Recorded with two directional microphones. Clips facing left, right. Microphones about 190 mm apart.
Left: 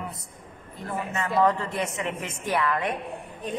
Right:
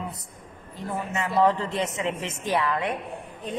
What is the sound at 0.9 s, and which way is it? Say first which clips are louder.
A woman's voice: even; 15° right (ahead or behind).